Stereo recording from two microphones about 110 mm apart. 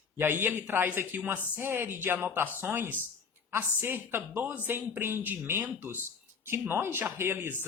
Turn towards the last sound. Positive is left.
turn(degrees=-20)  # may be behind; listen again after turning